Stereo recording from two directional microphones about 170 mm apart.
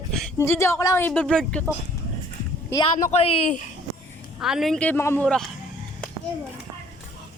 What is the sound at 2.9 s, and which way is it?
Speech, 45° left (ahead or behind).